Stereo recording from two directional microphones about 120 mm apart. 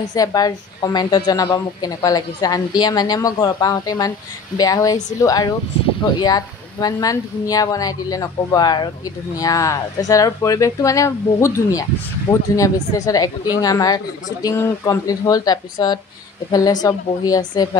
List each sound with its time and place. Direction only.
0.1 s a woman's voice: 30° left (ahead or behind)